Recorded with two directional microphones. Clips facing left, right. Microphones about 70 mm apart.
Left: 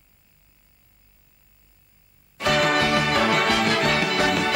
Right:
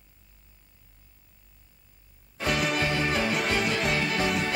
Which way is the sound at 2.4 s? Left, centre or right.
Left.